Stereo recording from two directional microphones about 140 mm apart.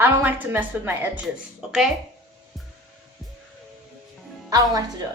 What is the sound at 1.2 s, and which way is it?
Speech, centre (ahead or behind).